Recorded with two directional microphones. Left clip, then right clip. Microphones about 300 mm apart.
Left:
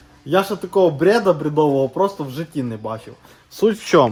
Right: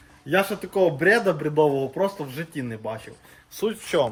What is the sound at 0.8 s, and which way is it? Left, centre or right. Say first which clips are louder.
Speech: left 4 dB; centre.